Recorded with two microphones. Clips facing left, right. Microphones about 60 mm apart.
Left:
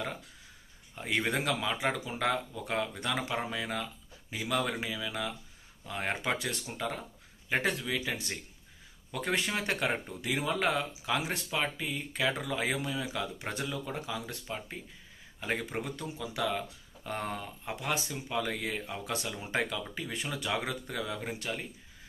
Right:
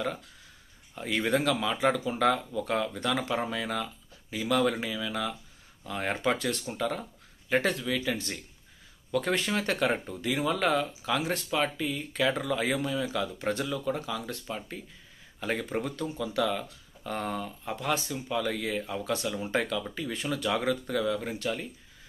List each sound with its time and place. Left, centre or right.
0.9 s speech: left
3.3 s speech: centre